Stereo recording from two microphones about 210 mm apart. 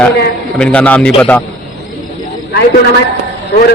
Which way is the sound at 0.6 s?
5° left (ahead or behind).